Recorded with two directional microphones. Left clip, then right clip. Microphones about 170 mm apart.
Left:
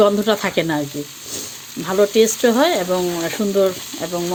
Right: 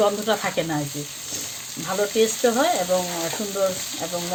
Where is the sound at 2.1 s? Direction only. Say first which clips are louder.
Left 3 dB; 55° left (ahead or behind).